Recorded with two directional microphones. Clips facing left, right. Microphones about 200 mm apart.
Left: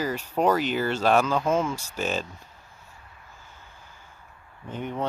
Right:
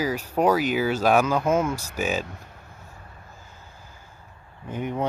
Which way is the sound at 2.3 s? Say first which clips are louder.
Right 5 dB; 60° right (ahead or behind).